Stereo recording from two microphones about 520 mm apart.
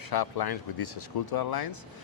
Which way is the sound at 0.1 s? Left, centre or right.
Left.